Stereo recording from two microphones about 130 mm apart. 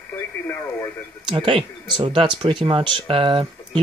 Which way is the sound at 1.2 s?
40° right (ahead or behind).